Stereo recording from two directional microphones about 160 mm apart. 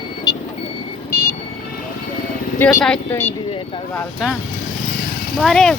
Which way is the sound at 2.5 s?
15° left (ahead or behind).